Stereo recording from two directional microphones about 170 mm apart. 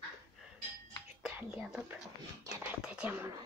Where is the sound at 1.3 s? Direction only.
5° right (ahead or behind).